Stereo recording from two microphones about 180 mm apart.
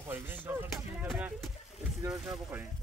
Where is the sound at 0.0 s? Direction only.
10° right (ahead or behind).